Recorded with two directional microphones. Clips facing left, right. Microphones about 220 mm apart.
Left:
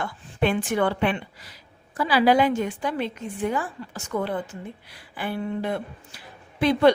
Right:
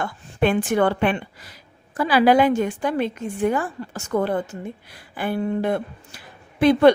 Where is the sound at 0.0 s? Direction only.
50° right (ahead or behind).